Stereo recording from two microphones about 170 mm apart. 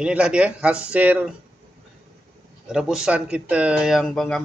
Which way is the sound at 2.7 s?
5° right (ahead or behind).